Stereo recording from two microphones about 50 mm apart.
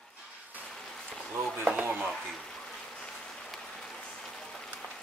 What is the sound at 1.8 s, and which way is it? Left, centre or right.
Chop, right.